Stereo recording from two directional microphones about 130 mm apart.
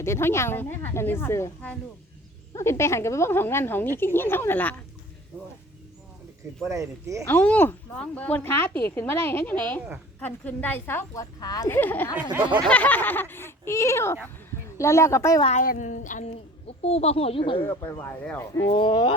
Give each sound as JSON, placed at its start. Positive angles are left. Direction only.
{"t": 0.0, "sound": "speech", "side_deg": 20}
{"t": 2.6, "sound": "speech", "side_deg": 20}
{"t": 6.7, "sound": "speech", "side_deg": -25}
{"t": 7.3, "sound": "speech", "side_deg": 10}
{"t": 11.7, "sound": "speech", "side_deg": 15}
{"t": 12.1, "sound": "a sound", "side_deg": -15}
{"t": 12.6, "sound": "speech", "side_deg": 10}
{"t": 15.4, "sound": "speech", "side_deg": 80}
{"t": 16.6, "sound": "speech", "side_deg": 50}
{"t": 17.6, "sound": "speech", "side_deg": 15}
{"t": 18.7, "sound": "speech", "side_deg": 40}